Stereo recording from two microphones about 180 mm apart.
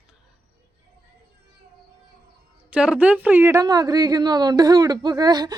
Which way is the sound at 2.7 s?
5° right (ahead or behind).